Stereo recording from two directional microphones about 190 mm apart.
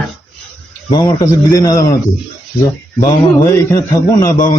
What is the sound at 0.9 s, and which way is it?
Speech, 15° left (ahead or behind).